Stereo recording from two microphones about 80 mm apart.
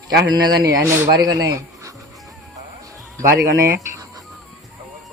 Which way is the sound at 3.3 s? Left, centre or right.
Right.